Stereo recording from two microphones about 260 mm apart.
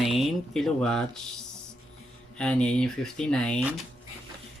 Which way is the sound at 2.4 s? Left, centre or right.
Centre.